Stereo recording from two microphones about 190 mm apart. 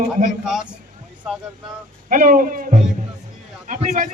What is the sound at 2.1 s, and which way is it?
A man's voice, 45° right (ahead or behind).